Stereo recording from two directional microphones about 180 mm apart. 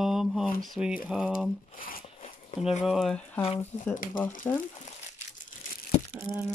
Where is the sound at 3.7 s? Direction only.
35° left (ahead or behind).